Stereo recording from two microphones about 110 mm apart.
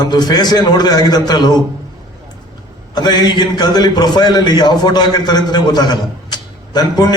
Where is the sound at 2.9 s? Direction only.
40° left (ahead or behind).